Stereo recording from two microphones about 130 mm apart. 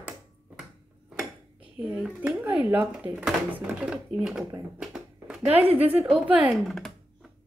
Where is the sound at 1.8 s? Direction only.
10° right (ahead or behind).